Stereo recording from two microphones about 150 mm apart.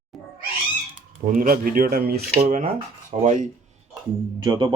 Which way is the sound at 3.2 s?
60° right (ahead or behind).